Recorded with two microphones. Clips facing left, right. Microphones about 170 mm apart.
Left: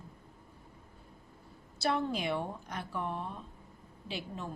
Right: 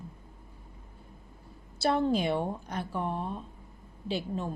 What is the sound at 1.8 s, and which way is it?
A woman's voice, 30° right (ahead or behind).